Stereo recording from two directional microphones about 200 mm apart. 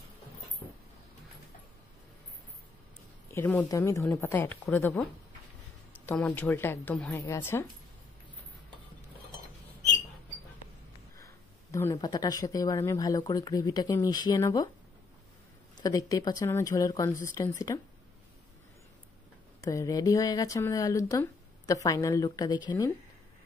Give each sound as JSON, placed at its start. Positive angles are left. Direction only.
{"t": 3.3, "sound": "speech", "side_deg": 10}
{"t": 6.0, "sound": "speech", "side_deg": 10}
{"t": 11.1, "sound": "speech", "side_deg": 15}
{"t": 15.7, "sound": "speech", "side_deg": 20}
{"t": 19.6, "sound": "speech", "side_deg": 15}